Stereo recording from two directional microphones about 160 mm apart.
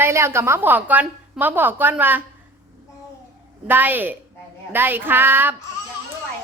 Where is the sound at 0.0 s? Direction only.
15° right (ahead or behind).